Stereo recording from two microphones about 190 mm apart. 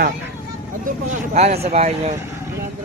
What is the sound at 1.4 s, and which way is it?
Speech, 35° right (ahead or behind).